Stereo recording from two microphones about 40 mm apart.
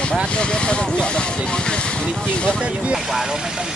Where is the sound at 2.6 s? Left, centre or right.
Right.